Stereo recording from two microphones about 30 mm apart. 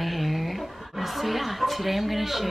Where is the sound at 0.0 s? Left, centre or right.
Centre.